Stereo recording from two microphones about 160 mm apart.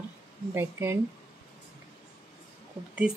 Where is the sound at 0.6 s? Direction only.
15° right (ahead or behind).